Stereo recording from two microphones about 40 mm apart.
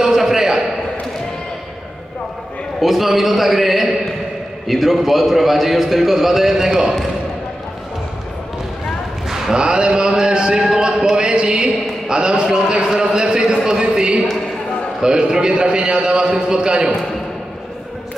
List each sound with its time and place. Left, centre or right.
0.0 s a sound: centre
2.8 s a man's voice: centre
9.3 s a man's voice: centre